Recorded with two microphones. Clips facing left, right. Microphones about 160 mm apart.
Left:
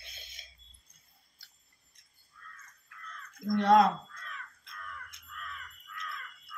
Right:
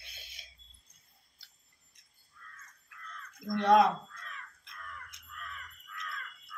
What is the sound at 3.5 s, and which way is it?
Speech, 20° right (ahead or behind).